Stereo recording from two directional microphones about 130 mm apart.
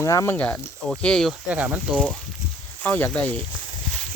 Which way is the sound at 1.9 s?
5° left (ahead or behind).